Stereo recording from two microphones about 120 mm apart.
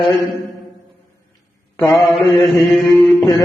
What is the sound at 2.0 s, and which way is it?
Mantra, centre (ahead or behind).